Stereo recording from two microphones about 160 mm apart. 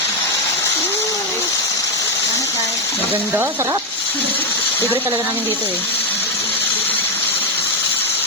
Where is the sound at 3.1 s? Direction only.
10° right (ahead or behind).